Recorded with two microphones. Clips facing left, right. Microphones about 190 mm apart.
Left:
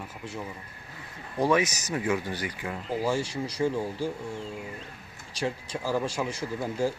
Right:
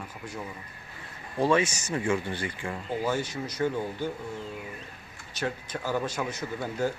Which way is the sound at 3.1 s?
30° left (ahead or behind).